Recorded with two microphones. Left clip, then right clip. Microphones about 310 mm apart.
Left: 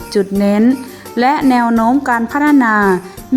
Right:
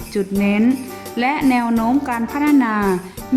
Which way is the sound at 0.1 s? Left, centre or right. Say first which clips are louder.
Left 6 dB; centre.